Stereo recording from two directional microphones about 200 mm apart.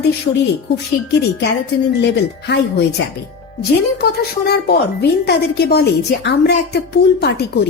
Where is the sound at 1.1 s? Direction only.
60° left (ahead or behind).